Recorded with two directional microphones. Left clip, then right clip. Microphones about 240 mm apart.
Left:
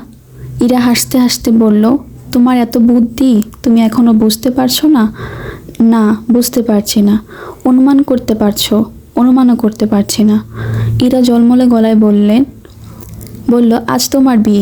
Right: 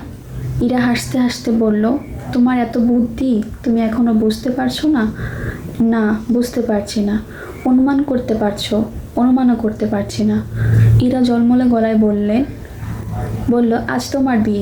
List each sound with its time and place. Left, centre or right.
0.6 s a woman's voice: left
13.5 s a woman's voice: left